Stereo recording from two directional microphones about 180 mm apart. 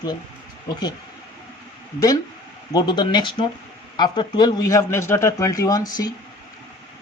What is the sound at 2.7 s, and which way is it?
A man's voice, 25° left (ahead or behind).